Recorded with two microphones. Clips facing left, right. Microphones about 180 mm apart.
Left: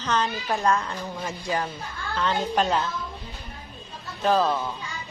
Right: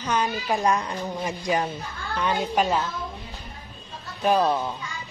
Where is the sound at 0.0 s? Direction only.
10° right (ahead or behind).